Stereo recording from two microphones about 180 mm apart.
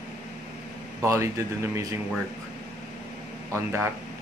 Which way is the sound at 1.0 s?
15° right (ahead or behind).